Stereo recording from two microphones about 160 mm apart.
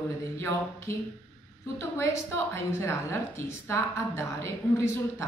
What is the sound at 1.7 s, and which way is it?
A woman's voice, 15° left (ahead or behind).